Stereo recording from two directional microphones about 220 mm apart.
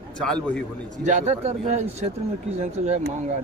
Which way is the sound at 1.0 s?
30° right (ahead or behind).